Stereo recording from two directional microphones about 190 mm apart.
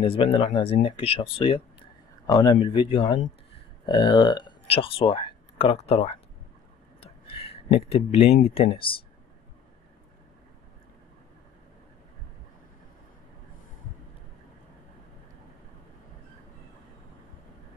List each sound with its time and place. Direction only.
0.0 s speech: 25° left (ahead or behind)